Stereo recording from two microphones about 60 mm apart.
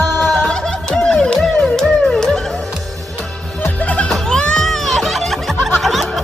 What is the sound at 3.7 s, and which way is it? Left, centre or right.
Music, left.